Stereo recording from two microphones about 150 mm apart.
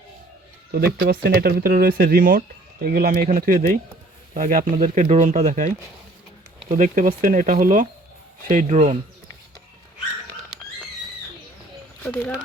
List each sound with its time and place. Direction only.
0.9 s speech: 90° right; by 4.6 s 65° right (ahead or behind)
4.7 s speech: 55° right (ahead or behind)
6.7 s speech: 60° right (ahead or behind)
12.0 s speech: 10° left (ahead or behind)